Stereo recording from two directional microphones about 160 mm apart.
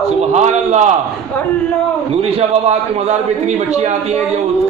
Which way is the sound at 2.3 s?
40° right (ahead or behind).